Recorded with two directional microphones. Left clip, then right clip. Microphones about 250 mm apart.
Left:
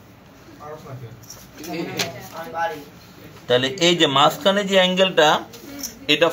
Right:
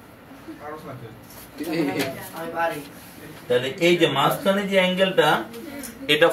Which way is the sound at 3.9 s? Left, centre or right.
Left.